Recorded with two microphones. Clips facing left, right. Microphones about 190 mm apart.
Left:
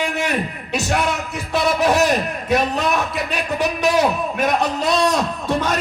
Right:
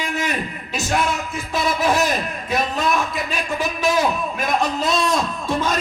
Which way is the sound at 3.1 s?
65° left (ahead or behind).